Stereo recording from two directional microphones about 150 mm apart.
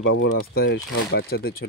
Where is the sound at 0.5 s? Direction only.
90° left.